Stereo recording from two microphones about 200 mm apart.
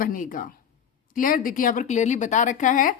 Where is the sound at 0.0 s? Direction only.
45° left (ahead or behind).